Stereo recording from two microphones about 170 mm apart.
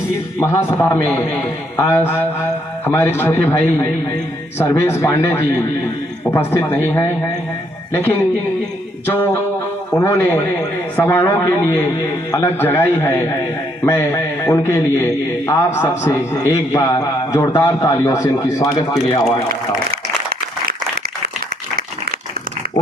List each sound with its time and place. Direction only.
0.3 s a man's voice: 15° left (ahead or behind)
9.0 s a man's voice: 15° left (ahead or behind)